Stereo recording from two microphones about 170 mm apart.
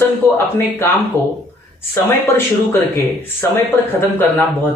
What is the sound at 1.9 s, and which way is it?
Speech, 15° left (ahead or behind).